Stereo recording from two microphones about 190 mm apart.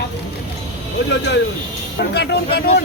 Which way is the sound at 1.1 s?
65° left (ahead or behind).